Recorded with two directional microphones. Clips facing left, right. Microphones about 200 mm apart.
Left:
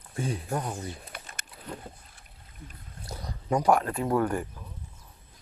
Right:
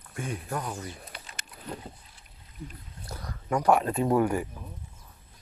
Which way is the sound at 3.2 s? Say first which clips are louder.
Left 2 dB; 15° left (ahead or behind).